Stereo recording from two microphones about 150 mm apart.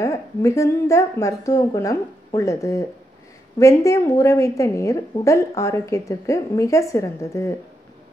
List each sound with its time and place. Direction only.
0.0 s a woman's voice: 20° left (ahead or behind)